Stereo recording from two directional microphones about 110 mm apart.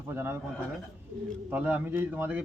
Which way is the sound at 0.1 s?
20° right (ahead or behind).